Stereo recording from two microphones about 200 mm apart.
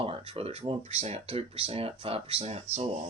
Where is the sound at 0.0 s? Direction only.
30° right (ahead or behind).